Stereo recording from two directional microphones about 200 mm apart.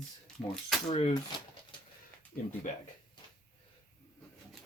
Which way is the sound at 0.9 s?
25° left (ahead or behind).